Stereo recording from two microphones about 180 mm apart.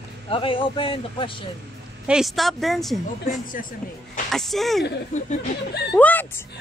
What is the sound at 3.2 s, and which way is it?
Speech, 50° left (ahead or behind).